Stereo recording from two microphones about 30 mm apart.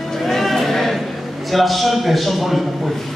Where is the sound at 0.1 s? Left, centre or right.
Centre.